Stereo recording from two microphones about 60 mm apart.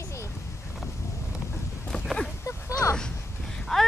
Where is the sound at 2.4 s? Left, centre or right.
Left.